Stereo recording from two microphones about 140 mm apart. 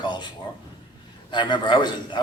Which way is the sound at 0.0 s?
35° left (ahead or behind).